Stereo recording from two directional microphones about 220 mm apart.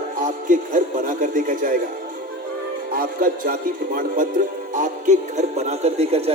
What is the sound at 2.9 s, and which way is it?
Speech, 40° right (ahead or behind).